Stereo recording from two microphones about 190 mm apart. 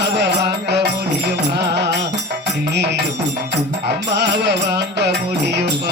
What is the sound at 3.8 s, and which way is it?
Music, 60° right (ahead or behind).